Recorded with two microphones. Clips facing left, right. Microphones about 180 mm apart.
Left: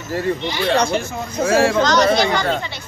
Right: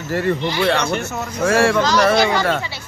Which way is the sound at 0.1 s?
70° right (ahead or behind).